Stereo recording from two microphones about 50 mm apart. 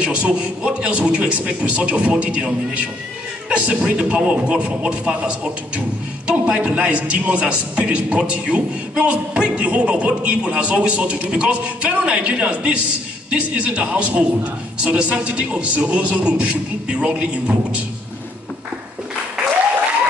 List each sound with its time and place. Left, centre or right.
0.0 s a man's voice: right